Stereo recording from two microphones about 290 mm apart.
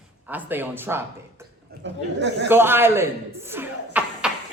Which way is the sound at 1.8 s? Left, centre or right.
Right.